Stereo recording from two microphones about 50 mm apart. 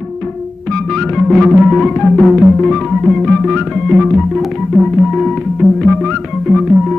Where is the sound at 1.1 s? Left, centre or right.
Centre.